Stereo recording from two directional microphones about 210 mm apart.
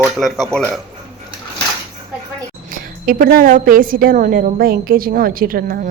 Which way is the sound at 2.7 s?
40° right (ahead or behind).